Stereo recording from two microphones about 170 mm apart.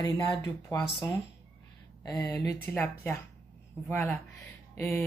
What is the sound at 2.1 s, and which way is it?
Speech, 15° left (ahead or behind).